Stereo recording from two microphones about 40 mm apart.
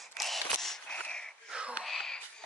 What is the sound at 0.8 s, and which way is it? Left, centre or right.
Wheeze, left.